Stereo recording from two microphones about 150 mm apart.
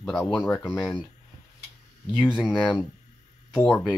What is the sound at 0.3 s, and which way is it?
Speech, 5° left (ahead or behind).